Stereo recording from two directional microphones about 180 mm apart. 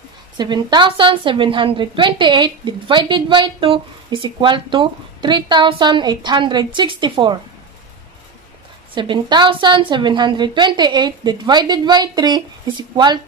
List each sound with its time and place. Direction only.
0.4 s a woman's voice: 25° right (ahead or behind)
8.9 s a woman's voice: 25° right (ahead or behind)